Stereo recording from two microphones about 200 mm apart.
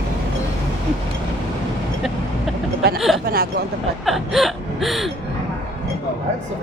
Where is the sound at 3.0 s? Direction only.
Centre (ahead or behind).